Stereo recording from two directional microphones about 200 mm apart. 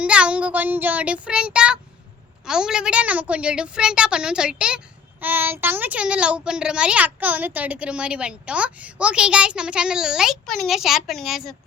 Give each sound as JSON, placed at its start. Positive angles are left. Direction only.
{"t": 0.0, "sound": "a woman's voice", "side_deg": -5}